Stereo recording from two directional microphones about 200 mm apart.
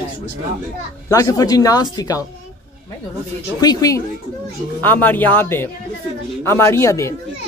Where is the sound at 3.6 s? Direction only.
20° left (ahead or behind).